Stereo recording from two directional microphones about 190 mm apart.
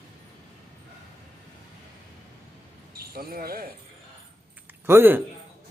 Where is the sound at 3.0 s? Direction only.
50° right (ahead or behind).